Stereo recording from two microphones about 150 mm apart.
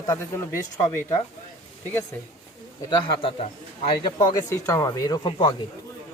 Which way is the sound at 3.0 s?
40° left (ahead or behind).